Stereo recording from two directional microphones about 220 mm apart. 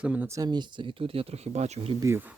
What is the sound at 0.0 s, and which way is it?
Speech, 5° right (ahead or behind).